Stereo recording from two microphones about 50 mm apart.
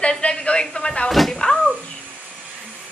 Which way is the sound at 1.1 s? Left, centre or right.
Centre.